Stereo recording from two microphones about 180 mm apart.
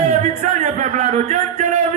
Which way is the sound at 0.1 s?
40° right (ahead or behind).